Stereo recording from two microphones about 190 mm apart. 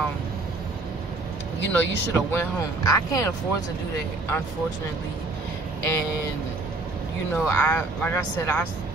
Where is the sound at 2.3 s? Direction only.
15° left (ahead or behind).